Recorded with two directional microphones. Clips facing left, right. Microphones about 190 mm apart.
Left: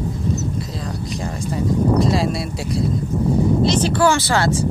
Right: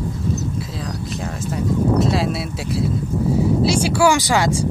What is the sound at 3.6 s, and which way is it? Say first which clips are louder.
Speech: right 2 dB; 10° right (ahead or behind).